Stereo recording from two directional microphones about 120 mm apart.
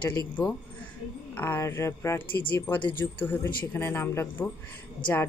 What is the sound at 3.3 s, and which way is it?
Speech, 20° left (ahead or behind).